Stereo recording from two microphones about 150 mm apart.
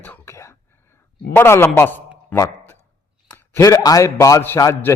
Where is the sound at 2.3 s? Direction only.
15° left (ahead or behind).